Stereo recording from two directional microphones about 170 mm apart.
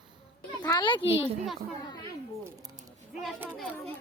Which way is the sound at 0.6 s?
25° left (ahead or behind).